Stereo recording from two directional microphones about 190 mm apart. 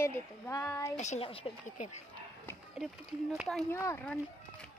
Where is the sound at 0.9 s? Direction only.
40° left (ahead or behind).